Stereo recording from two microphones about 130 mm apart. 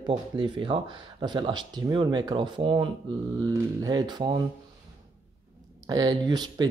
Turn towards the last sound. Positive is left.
turn(degrees=-30)  # may be behind; listen again after turning